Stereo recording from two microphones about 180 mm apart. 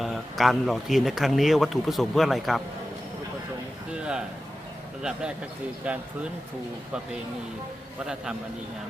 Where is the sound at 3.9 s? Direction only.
5° right (ahead or behind).